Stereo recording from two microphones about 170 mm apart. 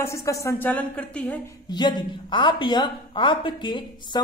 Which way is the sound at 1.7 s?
25° left (ahead or behind).